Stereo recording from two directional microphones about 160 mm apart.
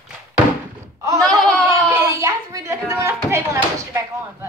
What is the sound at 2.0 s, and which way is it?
Speech, 20° right (ahead or behind).